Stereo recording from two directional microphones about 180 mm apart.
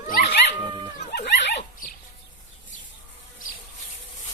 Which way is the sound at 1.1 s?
70° left (ahead or behind).